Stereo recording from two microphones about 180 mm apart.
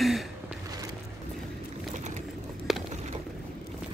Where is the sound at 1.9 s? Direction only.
40° right (ahead or behind).